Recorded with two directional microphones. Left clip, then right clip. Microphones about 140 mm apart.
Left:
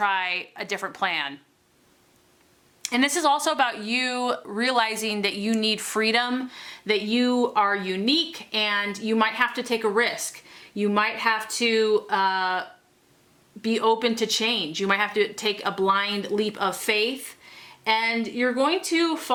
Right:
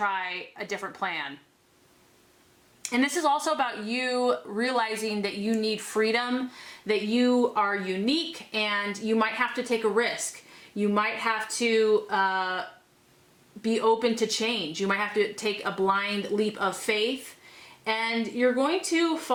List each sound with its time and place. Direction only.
0.0 s speech: 25° left (ahead or behind)
2.8 s speech: 20° left (ahead or behind)